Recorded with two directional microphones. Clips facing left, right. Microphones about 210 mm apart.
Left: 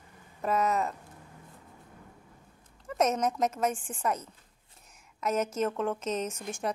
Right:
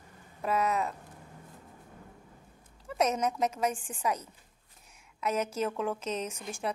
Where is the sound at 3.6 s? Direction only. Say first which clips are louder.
Left 1 dB; centre (ahead or behind).